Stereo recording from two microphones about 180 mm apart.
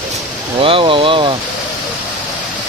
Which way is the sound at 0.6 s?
30° right (ahead or behind).